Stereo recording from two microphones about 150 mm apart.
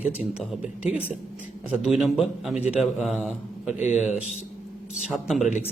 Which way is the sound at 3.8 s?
50° left (ahead or behind).